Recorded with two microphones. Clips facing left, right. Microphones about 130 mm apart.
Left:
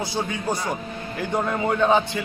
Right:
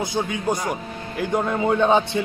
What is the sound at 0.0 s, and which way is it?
A man's voice, 15° right (ahead or behind).